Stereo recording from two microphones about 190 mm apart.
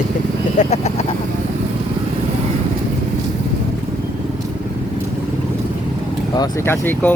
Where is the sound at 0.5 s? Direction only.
35° left (ahead or behind).